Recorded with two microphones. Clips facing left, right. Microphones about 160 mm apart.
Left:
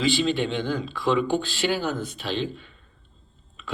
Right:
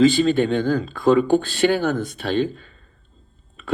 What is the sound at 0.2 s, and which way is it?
Speech, 45° right (ahead or behind).